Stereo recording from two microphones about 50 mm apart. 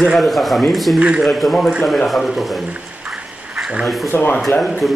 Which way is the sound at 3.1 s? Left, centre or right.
Centre.